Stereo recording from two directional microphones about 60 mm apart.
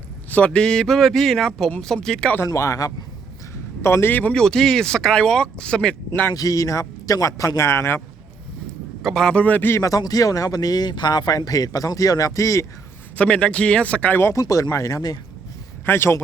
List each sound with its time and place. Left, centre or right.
0.3 s speech: left
0.6 s speech: centre
2.6 s speech: left
3.8 s a man's voice: left
4.1 s speech: left
4.4 s speech: centre
6.3 s speech: left
9.0 s a man's voice: centre
9.3 s speech: left
9.8 s speech: left
13.1 s speech: centre
14.3 s speech: left
15.9 s a man's voice: left